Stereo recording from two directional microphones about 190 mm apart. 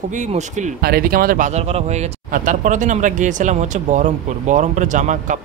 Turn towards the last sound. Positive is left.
turn(degrees=-40)  # may be behind; listen again after turning